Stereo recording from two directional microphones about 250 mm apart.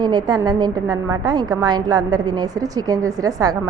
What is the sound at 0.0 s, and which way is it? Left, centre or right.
A woman's voice, centre.